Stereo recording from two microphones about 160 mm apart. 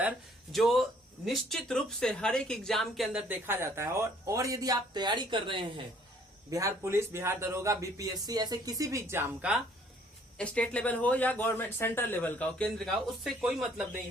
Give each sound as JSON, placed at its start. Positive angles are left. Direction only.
{"t": 0.5, "sound": "speech", "side_deg": 0}
{"t": 6.5, "sound": "speech", "side_deg": -20}
{"t": 10.3, "sound": "speech", "side_deg": 5}